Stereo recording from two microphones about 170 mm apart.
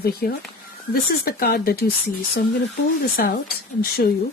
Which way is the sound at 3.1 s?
60° left (ahead or behind).